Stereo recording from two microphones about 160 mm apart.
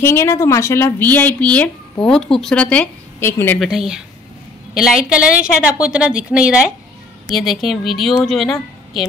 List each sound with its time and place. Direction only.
0.0 s speech: 15° left (ahead or behind)
3.5 s a woman's voice: centre (ahead or behind)